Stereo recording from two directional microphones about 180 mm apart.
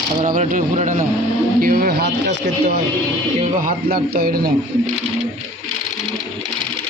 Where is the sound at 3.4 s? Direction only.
50° right (ahead or behind).